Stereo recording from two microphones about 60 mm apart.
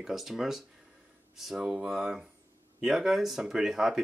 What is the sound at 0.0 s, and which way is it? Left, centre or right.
Speech, centre.